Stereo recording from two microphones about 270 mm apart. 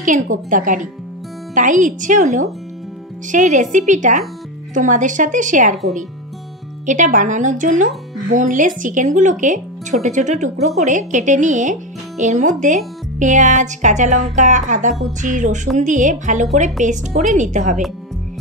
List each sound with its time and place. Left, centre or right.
0.0 s speech: right
6.9 s speech: right